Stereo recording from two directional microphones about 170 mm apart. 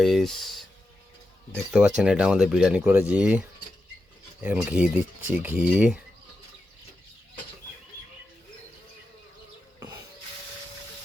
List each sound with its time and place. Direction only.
0.0 s speech: centre (ahead or behind)
1.5 s speech: centre (ahead or behind)
4.4 s speech: 10° right (ahead or behind)